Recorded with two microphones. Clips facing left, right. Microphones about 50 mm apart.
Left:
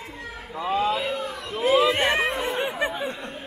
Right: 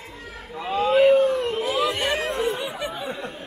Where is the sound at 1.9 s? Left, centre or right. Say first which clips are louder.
Left 2 dB; left.